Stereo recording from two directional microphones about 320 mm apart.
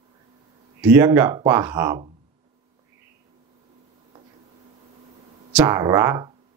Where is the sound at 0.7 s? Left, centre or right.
Centre.